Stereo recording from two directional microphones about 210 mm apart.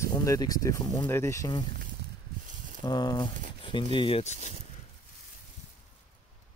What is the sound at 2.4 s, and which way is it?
Snake, 35° right (ahead or behind).